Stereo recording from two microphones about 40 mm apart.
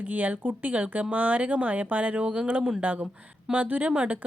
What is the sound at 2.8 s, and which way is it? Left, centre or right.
A woman's voice, right.